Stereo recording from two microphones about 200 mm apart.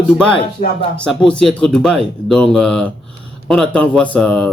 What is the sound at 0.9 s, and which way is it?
Speech, 5° left (ahead or behind).